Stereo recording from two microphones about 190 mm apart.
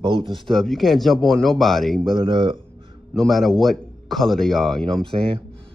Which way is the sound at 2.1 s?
25° right (ahead or behind).